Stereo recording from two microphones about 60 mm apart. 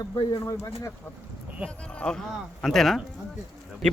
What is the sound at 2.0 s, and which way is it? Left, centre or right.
Speech, centre.